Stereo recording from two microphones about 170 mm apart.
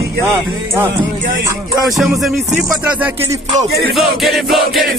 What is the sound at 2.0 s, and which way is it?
Music, centre (ahead or behind).